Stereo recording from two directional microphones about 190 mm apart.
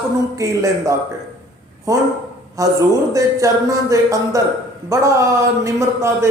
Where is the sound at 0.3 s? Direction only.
15° right (ahead or behind).